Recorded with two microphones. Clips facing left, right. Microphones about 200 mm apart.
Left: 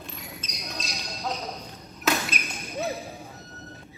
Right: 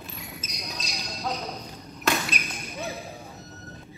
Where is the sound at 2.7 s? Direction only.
30° left (ahead or behind).